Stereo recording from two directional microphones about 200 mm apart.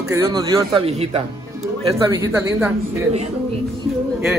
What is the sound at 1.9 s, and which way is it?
Speech, 15° right (ahead or behind).